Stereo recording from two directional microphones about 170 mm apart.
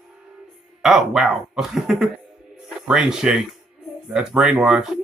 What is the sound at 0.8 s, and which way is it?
Speech, centre (ahead or behind).